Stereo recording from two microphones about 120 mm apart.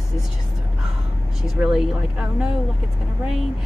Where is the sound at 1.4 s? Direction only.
5° right (ahead or behind).